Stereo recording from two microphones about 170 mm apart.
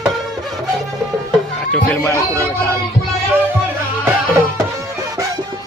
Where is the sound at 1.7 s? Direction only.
10° left (ahead or behind).